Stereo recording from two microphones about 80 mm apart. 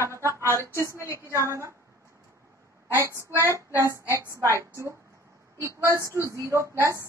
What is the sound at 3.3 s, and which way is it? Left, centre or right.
Child singing, right.